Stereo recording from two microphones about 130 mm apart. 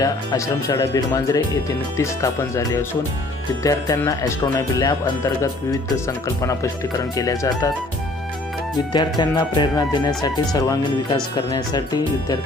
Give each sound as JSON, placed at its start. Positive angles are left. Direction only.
{"t": 0.0, "sound": "speech", "side_deg": 30}
{"t": 8.9, "sound": "speech", "side_deg": 30}